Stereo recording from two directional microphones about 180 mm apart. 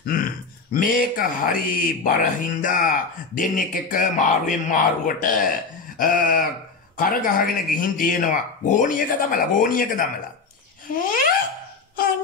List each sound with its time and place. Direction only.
0.0 s grunt: 50° left (ahead or behind)
0.7 s speech: 50° left (ahead or behind)